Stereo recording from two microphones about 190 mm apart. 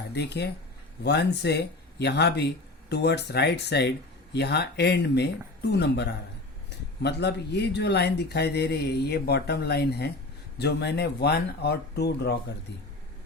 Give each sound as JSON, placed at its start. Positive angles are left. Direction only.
{"t": 0.1, "sound": "speech", "side_deg": 60}